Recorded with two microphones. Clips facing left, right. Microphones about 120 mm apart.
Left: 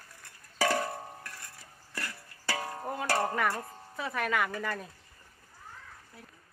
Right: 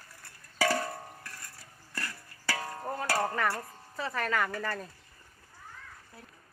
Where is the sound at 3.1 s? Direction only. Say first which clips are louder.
Left 1 dB; 10° left (ahead or behind).